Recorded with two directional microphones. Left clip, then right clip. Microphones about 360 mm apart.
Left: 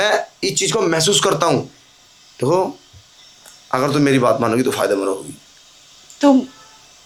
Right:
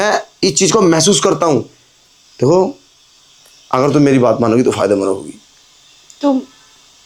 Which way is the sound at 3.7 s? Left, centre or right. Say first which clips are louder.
Right 5 dB; right.